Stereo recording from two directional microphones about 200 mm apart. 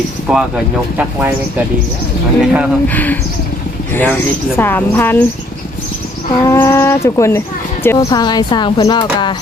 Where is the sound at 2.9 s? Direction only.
10° left (ahead or behind).